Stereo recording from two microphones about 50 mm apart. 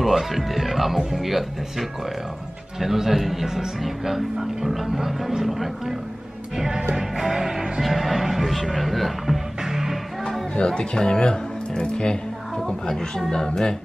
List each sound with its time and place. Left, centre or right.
0.0 s speech: centre
6.5 s music: centre
10.5 s speech: centre